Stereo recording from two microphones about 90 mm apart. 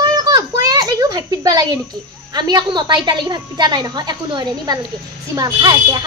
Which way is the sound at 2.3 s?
50° right (ahead or behind).